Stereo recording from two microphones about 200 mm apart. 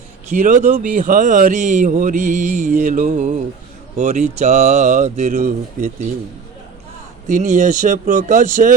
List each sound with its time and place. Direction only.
0.3 s speech: 40° right (ahead or behind)
7.3 s speech: 40° right (ahead or behind)